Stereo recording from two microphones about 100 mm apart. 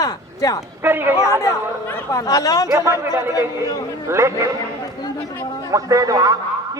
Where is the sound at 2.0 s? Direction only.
35° left (ahead or behind).